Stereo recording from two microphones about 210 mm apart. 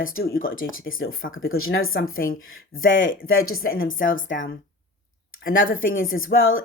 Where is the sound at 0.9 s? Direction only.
70° left (ahead or behind).